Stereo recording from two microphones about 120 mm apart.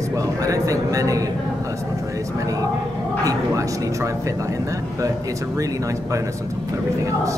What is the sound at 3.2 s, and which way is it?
Speech, 25° right (ahead or behind).